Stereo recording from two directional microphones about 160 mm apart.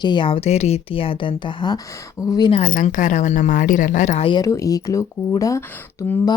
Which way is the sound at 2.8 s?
50° left (ahead or behind).